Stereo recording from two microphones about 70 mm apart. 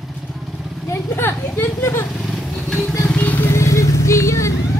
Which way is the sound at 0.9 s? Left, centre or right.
Left.